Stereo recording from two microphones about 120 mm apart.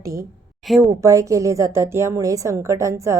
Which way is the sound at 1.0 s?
25° right (ahead or behind).